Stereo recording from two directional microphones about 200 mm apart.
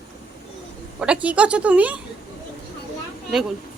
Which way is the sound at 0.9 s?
5° right (ahead or behind).